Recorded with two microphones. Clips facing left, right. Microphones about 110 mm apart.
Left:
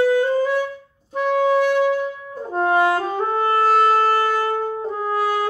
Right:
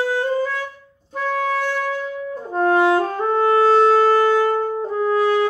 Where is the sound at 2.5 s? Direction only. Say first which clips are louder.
Right 1 dB; 15° left (ahead or behind).